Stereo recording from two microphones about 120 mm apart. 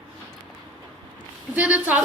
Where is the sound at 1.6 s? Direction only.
10° right (ahead or behind).